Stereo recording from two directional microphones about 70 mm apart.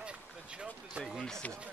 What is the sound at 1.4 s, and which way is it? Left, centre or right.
Speech, centre.